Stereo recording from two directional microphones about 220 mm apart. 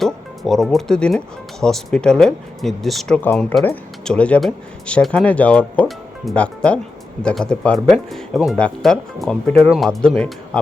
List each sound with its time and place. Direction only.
0.0 s speech: centre (ahead or behind)